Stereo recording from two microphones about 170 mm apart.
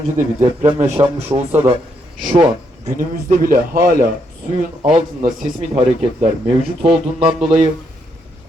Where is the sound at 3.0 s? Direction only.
55° right (ahead or behind).